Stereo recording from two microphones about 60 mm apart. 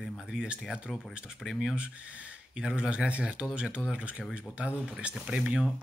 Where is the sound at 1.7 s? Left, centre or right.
Right.